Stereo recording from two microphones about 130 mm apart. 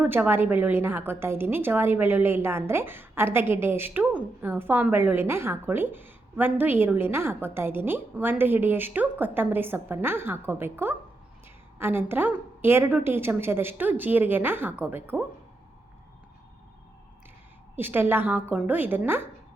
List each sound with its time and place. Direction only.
0.0 s a woman's voice: 15° right (ahead or behind)
17.7 s a woman's voice: 15° right (ahead or behind)